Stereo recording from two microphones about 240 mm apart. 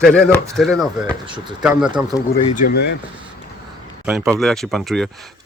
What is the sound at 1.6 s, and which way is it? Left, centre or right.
Speech, centre.